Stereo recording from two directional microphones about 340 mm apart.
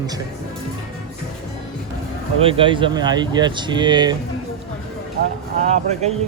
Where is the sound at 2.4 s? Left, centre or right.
Centre.